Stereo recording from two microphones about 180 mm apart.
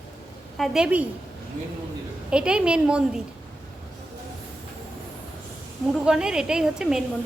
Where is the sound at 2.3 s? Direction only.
5° right (ahead or behind).